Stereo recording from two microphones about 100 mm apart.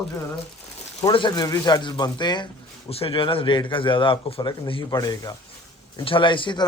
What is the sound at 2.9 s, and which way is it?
Speech, 70° left (ahead or behind).